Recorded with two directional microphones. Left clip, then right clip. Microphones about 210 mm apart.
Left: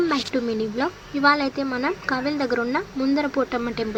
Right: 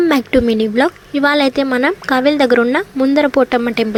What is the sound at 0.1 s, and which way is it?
Speech, 45° right (ahead or behind).